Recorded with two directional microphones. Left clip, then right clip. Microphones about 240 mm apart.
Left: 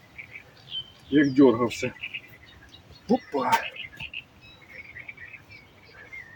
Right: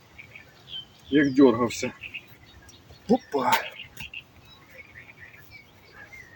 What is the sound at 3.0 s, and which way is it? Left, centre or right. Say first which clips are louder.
Speech: right 2 dB; right.